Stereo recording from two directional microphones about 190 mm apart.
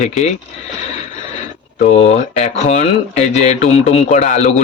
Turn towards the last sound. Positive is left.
turn(degrees=40)  # may be behind; listen again after turning